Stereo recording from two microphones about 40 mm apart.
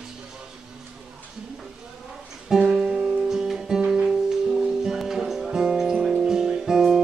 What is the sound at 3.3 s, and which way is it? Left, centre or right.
Guitar, centre.